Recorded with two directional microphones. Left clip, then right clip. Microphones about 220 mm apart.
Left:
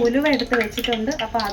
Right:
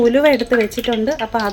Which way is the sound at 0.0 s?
50° right (ahead or behind).